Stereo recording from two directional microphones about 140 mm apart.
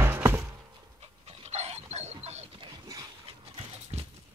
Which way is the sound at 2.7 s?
25° right (ahead or behind).